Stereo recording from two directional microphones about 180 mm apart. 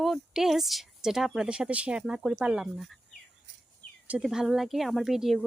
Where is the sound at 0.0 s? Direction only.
Centre (ahead or behind).